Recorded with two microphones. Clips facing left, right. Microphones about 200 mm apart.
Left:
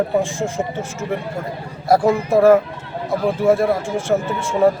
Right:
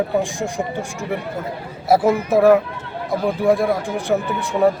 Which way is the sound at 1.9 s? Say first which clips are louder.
Even; 5° right (ahead or behind).